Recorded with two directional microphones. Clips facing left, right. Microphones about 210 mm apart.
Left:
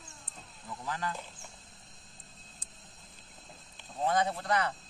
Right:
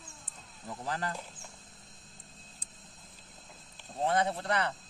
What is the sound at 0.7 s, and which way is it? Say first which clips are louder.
Speech: right 1 dB; 40° right (ahead or behind).